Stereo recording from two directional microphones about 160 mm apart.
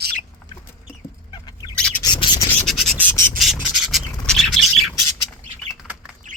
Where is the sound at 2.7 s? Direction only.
Centre (ahead or behind).